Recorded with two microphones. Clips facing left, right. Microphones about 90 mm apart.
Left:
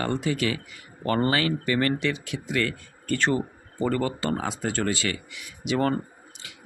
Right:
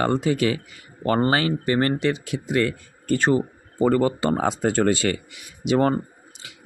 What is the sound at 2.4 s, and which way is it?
Speech, 25° right (ahead or behind).